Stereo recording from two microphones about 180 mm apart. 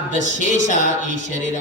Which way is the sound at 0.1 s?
45° left (ahead or behind).